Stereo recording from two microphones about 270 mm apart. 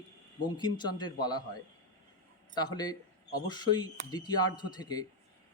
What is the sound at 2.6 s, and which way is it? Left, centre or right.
Speech, centre.